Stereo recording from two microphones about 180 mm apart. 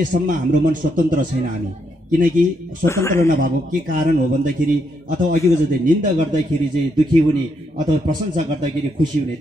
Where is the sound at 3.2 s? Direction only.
45° right (ahead or behind).